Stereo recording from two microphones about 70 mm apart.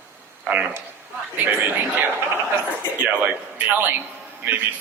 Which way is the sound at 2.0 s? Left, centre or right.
Right.